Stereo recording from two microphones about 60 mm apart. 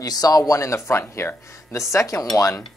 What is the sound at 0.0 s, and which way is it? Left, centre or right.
Speech, left.